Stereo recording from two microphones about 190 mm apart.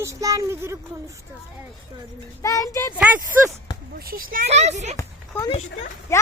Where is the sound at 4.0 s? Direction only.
50° right (ahead or behind).